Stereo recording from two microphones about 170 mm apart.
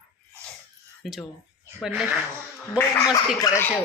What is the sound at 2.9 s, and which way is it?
Speech, 25° left (ahead or behind).